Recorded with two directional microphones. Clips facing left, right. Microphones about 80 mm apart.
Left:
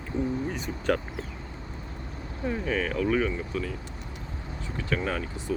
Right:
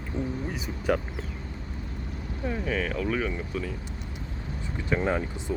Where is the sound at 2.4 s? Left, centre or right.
Centre.